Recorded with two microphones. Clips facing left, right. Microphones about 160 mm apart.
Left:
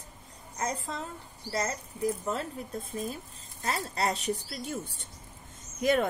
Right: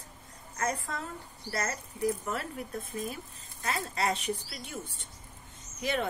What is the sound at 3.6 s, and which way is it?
A woman's voice, 35° left (ahead or behind).